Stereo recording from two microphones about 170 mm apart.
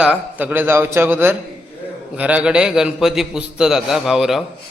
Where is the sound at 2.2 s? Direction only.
10° right (ahead or behind).